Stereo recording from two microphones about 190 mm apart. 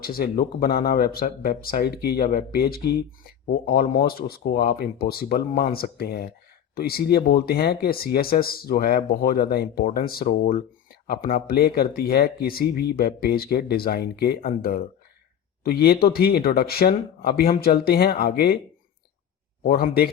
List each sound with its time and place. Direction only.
0.0 s speech: 50° left (ahead or behind)
19.6 s speech: 50° left (ahead or behind)